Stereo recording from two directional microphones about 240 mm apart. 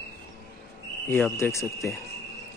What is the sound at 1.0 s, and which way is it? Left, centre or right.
Speech, centre.